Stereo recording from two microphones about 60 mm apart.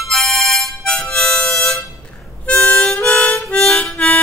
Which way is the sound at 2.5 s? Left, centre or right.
Left.